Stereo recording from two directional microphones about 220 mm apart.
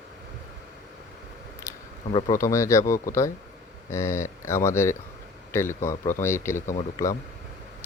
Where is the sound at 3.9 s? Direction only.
10° left (ahead or behind).